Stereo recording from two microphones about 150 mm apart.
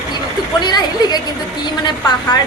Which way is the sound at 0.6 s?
25° left (ahead or behind).